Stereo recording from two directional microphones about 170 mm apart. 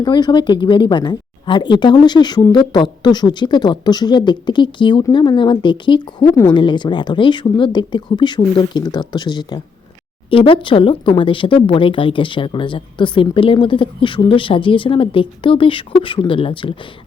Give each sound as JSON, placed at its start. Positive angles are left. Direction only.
{"t": 0.0, "sound": "speech", "side_deg": 25}